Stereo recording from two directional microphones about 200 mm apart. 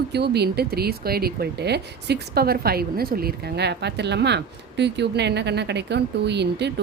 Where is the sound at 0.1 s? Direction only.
55° right (ahead or behind).